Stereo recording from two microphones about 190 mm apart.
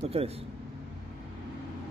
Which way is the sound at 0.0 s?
30° right (ahead or behind).